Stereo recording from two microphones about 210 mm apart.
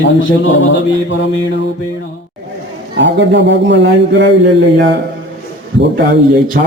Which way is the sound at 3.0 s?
55° right (ahead or behind).